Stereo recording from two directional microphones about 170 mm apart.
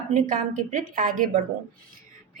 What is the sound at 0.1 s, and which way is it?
A woman's voice, 50° right (ahead or behind).